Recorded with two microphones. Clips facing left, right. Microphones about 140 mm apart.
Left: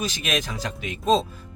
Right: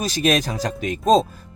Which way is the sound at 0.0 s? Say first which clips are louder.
Right 7 dB; 35° right (ahead or behind).